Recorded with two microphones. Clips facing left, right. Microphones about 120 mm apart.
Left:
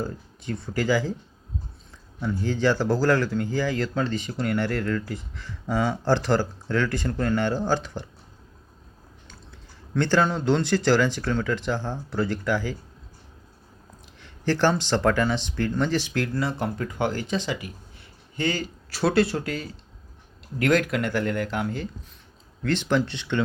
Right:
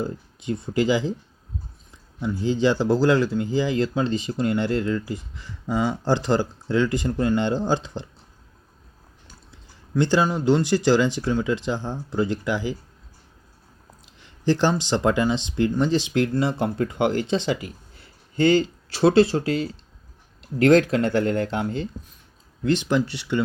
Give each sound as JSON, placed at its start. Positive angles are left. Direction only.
{"t": 0.0, "sound": "speech", "side_deg": -20}
{"t": 2.2, "sound": "speech", "side_deg": -15}
{"t": 9.2, "sound": "speech", "side_deg": -10}
{"t": 14.4, "sound": "speech", "side_deg": -15}
{"t": 22.6, "sound": "speech", "side_deg": -15}